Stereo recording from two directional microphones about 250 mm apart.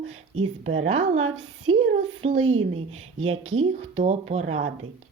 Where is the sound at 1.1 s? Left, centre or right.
Right.